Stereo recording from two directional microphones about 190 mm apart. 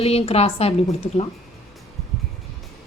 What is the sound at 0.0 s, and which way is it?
Speech, 30° left (ahead or behind).